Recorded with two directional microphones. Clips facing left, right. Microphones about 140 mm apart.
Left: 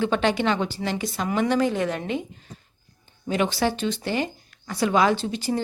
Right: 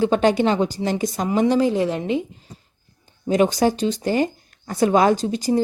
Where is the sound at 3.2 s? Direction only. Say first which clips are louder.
Right 6 dB; 40° right (ahead or behind).